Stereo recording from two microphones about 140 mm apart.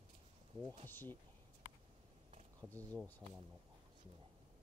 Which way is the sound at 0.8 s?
15° left (ahead or behind).